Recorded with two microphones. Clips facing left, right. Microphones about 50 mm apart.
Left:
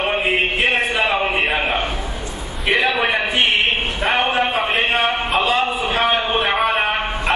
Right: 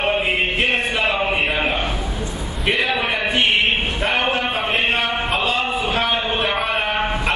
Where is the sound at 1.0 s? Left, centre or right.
Left.